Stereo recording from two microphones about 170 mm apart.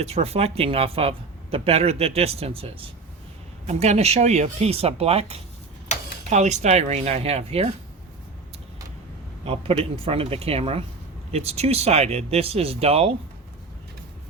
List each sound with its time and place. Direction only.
0.0 s speech: 35° right (ahead or behind)
9.4 s speech: 35° right (ahead or behind)